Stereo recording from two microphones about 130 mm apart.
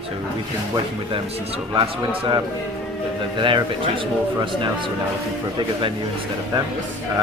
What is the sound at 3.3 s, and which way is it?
Speech, 40° right (ahead or behind).